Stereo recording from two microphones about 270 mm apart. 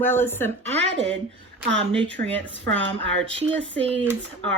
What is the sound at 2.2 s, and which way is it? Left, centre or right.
Speech, centre.